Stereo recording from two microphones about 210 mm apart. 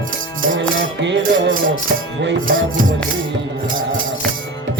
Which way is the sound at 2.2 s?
65° right (ahead or behind).